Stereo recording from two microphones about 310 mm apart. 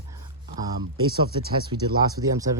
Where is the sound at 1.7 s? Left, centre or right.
Right.